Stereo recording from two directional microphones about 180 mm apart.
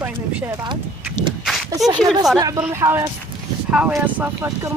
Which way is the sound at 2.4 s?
20° right (ahead or behind).